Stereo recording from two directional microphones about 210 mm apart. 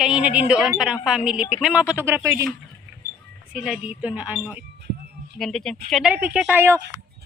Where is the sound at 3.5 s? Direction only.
5° right (ahead or behind).